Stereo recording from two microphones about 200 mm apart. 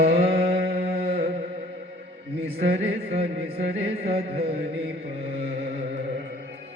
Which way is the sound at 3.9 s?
30° right (ahead or behind).